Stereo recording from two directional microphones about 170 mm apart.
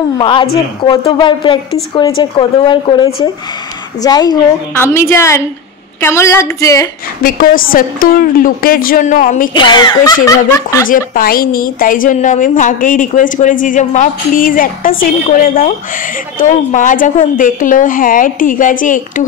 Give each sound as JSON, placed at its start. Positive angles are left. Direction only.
{"t": 0.2, "sound": "a woman's voice", "side_deg": 30}
{"t": 7.2, "sound": "a woman's voice", "side_deg": 60}
{"t": 9.5, "sound": "a woman's voice", "side_deg": 25}
{"t": 10.9, "sound": "a woman's voice", "side_deg": 55}